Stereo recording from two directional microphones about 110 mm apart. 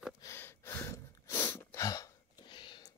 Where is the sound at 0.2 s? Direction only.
25° left (ahead or behind).